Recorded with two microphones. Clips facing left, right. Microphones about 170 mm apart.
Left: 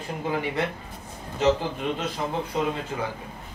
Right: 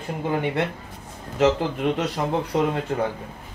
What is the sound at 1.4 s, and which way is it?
Speech, 80° right.